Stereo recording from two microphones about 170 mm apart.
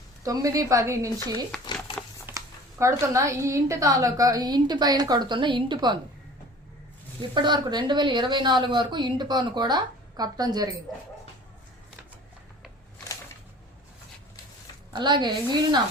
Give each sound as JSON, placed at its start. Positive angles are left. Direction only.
{"t": 0.2, "sound": "speech", "side_deg": -20}
{"t": 2.2, "sound": "speech", "side_deg": -15}
{"t": 7.2, "sound": "speech", "side_deg": -25}
{"t": 14.9, "sound": "speech", "side_deg": -25}